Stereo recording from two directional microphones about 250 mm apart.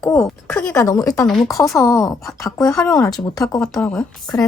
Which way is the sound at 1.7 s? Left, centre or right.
Centre.